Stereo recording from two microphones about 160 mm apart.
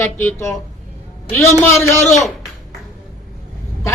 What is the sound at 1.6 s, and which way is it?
Speech, 15° left (ahead or behind).